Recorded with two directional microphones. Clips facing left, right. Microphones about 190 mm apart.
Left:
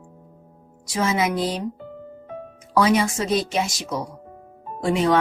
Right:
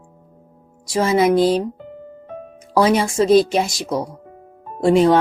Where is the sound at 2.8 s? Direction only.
30° right (ahead or behind).